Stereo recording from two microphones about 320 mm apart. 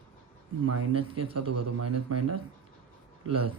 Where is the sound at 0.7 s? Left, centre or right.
Right.